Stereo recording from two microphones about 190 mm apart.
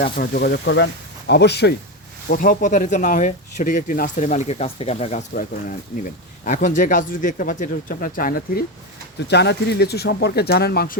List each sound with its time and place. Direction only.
0.0 s speech: 50° left (ahead or behind)
0.6 s speech: 70° left (ahead or behind)
2.3 s speech: 50° left (ahead or behind)
9.2 s speech: 65° left (ahead or behind)